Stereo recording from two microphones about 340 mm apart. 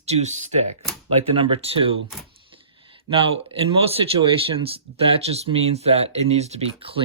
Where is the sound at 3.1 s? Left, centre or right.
Centre.